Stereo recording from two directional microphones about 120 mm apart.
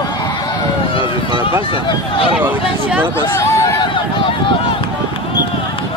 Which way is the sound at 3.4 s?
25° left (ahead or behind).